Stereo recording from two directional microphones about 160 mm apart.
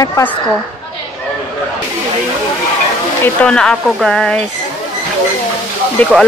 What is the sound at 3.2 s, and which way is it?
Speech, 5° left (ahead or behind).